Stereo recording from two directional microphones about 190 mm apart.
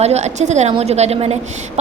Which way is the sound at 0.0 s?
35° right (ahead or behind).